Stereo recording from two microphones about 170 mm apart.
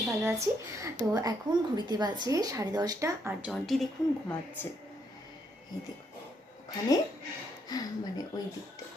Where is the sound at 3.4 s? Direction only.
Centre (ahead or behind).